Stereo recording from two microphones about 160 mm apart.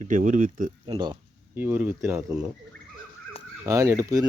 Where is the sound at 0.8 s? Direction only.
30° right (ahead or behind).